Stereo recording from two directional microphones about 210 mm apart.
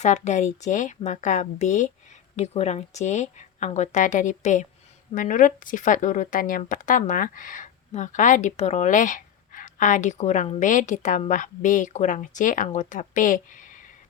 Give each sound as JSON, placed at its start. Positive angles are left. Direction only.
{"t": 0.0, "sound": "speech", "side_deg": 35}